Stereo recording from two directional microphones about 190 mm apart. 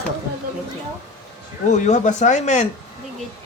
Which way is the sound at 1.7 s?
40° left (ahead or behind).